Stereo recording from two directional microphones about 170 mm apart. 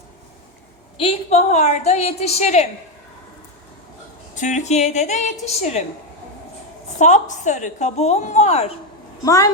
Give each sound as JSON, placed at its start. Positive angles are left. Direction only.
{"t": 0.9, "sound": "a woman's voice", "side_deg": 35}
{"t": 4.4, "sound": "a woman's voice", "side_deg": 45}
{"t": 7.0, "sound": "a woman's voice", "side_deg": 45}
{"t": 9.2, "sound": "a woman's voice", "side_deg": 20}